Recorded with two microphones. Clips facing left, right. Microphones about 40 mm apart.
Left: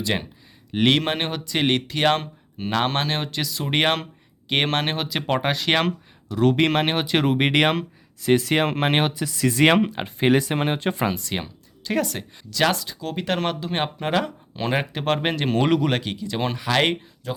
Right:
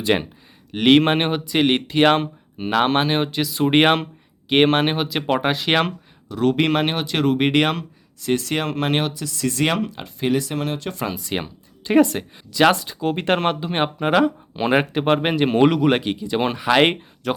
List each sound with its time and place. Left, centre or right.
0.7 s speech: centre
0.9 s speech: right; by 9.6 s centre
9.6 s speech: left
11.1 s speech: centre
11.8 s speech: right
17.2 s speech: right